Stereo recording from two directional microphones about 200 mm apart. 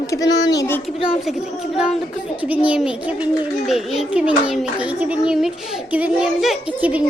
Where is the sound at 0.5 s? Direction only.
15° left (ahead or behind).